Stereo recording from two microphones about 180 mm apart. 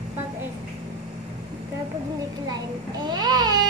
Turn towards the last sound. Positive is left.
turn(degrees=-25)  # may be behind; listen again after turning